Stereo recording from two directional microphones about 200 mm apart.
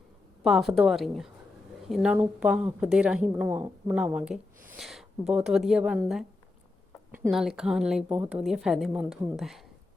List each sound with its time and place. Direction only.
0.4 s a woman's voice: centre (ahead or behind)